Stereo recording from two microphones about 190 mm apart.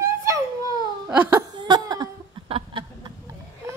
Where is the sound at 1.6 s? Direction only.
20° right (ahead or behind).